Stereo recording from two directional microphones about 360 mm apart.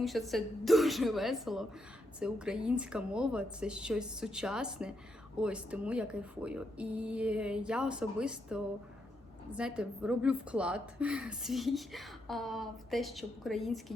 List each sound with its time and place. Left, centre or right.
0.0 s a woman's voice: centre